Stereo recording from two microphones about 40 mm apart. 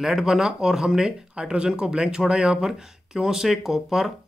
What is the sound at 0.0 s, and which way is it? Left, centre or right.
Speech, centre.